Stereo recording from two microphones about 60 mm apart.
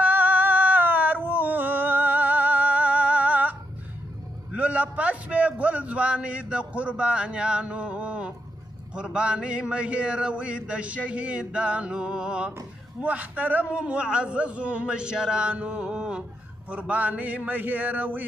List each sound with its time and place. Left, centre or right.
0.0 s a sound: right
4.5 s a man's voice: right
13.7 s a man's voice: centre